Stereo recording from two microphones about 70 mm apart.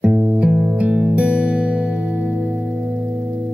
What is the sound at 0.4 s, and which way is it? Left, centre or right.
Music, centre.